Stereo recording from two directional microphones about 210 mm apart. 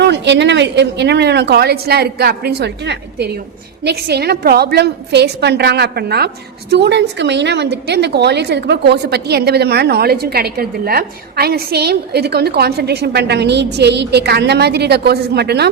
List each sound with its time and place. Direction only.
0.0 s a woman's voice: 55° right (ahead or behind)